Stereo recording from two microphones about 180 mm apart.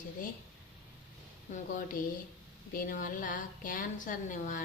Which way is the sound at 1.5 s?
45° left (ahead or behind).